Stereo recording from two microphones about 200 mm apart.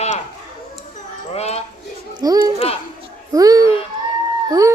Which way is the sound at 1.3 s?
30° left (ahead or behind).